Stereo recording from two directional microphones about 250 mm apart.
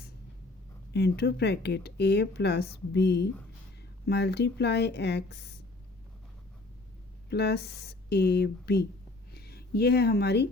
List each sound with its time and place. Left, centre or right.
0.9 s speech: left
7.3 s speech: left